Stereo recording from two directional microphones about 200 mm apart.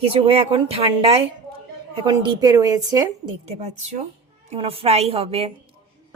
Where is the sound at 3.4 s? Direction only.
35° right (ahead or behind).